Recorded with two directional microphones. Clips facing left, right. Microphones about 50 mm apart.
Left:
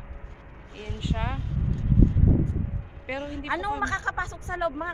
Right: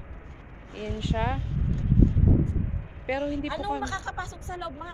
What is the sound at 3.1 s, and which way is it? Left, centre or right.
Speech, centre.